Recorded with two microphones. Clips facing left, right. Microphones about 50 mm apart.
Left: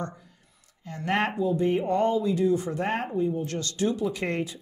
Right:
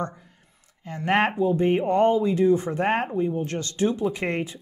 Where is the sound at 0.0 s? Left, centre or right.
Right.